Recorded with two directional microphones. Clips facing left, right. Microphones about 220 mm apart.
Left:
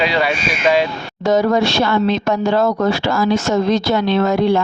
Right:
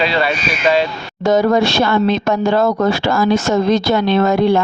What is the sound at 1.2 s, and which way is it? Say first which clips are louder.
Speech: right 2 dB; 50° right (ahead or behind).